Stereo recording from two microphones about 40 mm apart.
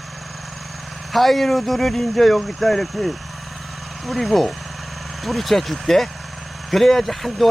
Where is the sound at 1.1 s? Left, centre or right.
Centre.